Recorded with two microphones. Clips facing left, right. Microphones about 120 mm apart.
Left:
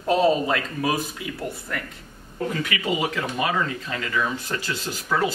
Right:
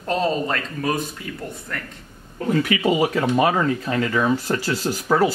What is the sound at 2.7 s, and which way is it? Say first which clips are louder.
Speech: right 6 dB; 35° right (ahead or behind).